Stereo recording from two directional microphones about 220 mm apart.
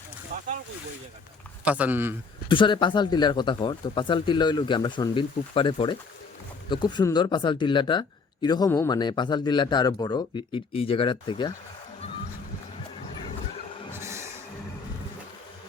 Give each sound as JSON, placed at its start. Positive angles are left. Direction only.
{"t": 1.6, "sound": "speech", "side_deg": -5}
{"t": 2.5, "sound": "speech", "side_deg": 20}
{"t": 13.9, "sound": "a sound", "side_deg": -10}